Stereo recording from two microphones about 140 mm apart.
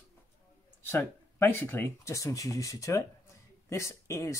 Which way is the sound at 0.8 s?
15° left (ahead or behind).